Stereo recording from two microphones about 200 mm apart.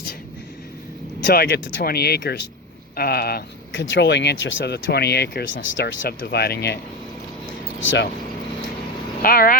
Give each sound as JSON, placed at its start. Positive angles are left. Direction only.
{"t": 1.3, "sound": "speech", "side_deg": 50}
{"t": 1.8, "sound": "speech", "side_deg": 50}
{"t": 3.7, "sound": "speech", "side_deg": 65}
{"t": 6.0, "sound": "speech", "side_deg": 50}
{"t": 7.8, "sound": "speech", "side_deg": 70}
{"t": 9.2, "sound": "speech", "side_deg": 45}